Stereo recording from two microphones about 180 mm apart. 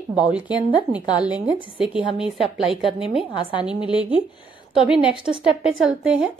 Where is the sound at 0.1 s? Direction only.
5° right (ahead or behind).